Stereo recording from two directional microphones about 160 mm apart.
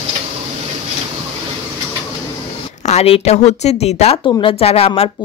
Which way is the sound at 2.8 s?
40° left (ahead or behind).